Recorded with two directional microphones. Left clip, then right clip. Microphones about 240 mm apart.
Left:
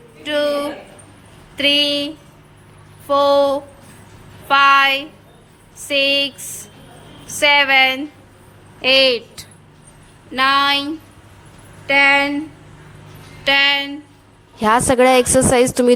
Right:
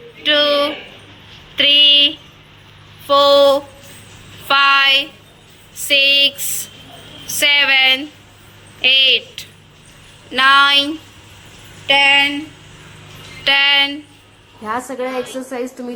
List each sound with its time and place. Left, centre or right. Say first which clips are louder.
0.2 s a sound: right 5 dB; centre
3.1 s speech: right 4 dB; centre
7.3 s speech: even; centre
10.3 s speech: right 4 dB; centre
13.4 s speech: right 2 dB; centre
14.6 s a woman's voice: left 10 dB; left